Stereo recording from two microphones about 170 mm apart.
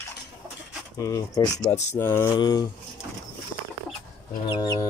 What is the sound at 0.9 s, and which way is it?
Speech, 20° left (ahead or behind).